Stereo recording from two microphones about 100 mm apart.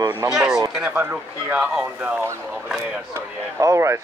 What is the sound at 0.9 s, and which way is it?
Speech, 15° right (ahead or behind).